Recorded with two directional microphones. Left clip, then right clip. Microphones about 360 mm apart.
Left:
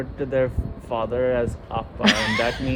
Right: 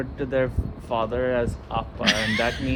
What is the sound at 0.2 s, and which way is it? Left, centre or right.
Speech, centre.